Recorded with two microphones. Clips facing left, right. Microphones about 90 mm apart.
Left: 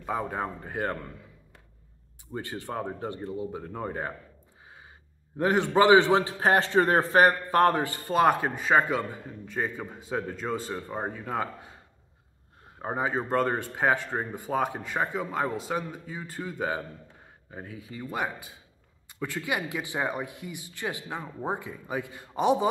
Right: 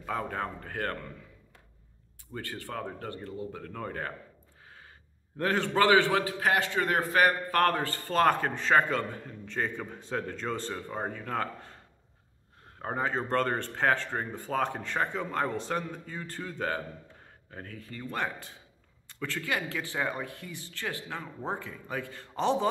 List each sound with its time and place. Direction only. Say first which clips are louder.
0.0 s a man's voice: left 2 dB; 15° left (ahead or behind)
2.3 s speech: left 4 dB; 20° left (ahead or behind)
5.4 s a man's voice: left 4 dB; 20° left (ahead or behind)